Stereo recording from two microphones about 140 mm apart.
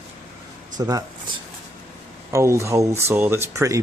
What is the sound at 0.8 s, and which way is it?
Speech, 30° right (ahead or behind).